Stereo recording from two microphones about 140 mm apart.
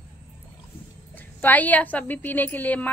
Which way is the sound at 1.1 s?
10° left (ahead or behind).